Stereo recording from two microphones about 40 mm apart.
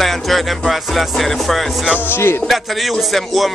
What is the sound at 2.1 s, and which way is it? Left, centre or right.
Music, left.